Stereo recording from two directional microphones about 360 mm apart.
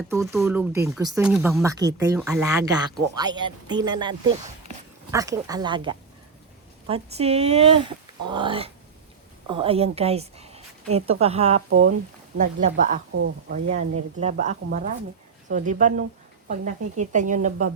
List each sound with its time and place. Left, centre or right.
0.1 s a woman's voice: centre
13.1 s speech: right
14.2 s a woman's voice: centre